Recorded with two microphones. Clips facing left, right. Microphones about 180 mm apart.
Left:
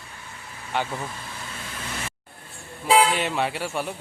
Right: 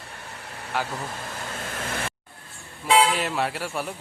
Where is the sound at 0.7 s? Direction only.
Centre (ahead or behind).